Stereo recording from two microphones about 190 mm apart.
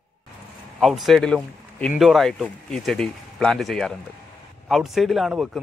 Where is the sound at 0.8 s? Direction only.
Centre (ahead or behind).